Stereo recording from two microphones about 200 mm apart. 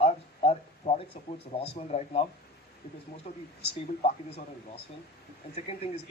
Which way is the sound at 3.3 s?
35° left (ahead or behind).